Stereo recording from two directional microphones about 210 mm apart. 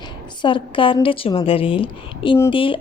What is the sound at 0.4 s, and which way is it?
A woman's voice, 25° left (ahead or behind).